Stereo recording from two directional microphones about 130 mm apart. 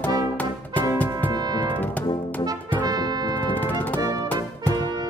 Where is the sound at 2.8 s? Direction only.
30° right (ahead or behind).